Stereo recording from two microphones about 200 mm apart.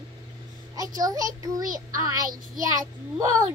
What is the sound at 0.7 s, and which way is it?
Speech, 20° right (ahead or behind).